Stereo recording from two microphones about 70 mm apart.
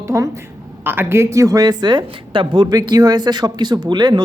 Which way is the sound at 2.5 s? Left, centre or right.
Right.